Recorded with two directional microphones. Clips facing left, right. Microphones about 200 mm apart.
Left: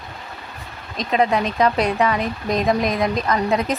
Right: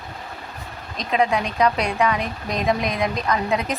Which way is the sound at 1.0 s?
Centre (ahead or behind).